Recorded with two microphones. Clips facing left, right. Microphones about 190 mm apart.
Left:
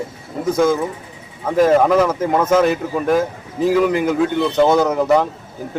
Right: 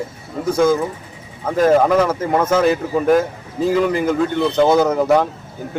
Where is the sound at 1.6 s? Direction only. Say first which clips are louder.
Left 1 dB; centre (ahead or behind).